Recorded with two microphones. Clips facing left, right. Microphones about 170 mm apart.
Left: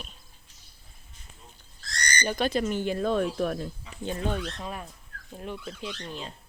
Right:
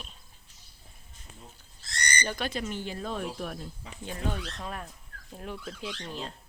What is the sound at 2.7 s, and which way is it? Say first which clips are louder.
Speech: left 8 dB; 55° left (ahead or behind).